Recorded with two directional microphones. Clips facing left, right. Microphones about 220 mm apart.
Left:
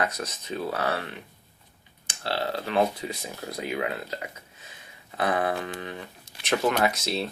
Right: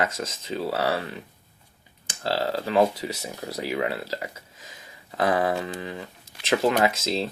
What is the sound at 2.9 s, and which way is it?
Speech, 90° right.